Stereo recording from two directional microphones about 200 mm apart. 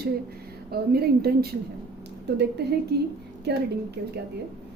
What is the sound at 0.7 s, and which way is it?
A woman's voice, 50° right (ahead or behind).